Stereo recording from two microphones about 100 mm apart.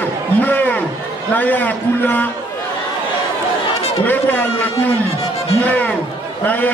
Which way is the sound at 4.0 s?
15° left (ahead or behind).